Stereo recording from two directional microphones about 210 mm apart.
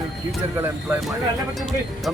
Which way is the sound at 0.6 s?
5° right (ahead or behind).